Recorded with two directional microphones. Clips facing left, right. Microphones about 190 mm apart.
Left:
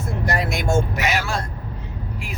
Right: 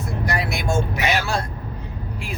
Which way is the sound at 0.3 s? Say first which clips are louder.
Left 3 dB; 45° left (ahead or behind).